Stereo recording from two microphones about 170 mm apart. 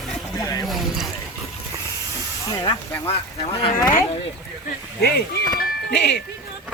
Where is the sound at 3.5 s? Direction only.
35° left (ahead or behind).